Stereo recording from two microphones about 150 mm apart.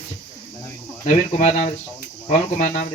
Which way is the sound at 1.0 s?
50° left (ahead or behind).